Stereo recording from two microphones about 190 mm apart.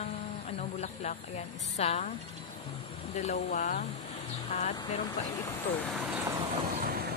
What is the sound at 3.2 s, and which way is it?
Speech, 35° left (ahead or behind).